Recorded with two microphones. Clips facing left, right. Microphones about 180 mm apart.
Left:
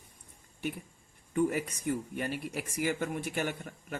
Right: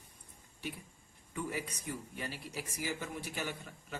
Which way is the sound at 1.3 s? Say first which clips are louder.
Left 10 dB; 55° left (ahead or behind).